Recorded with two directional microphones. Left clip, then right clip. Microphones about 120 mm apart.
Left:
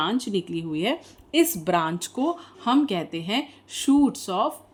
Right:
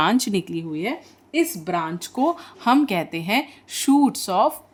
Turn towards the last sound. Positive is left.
turn(degrees=-35)  # may be behind; listen again after turning